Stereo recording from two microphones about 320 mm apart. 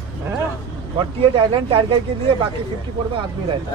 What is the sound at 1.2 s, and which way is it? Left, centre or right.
Speech, centre.